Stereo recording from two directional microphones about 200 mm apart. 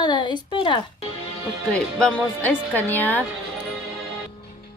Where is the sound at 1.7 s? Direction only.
5° left (ahead or behind).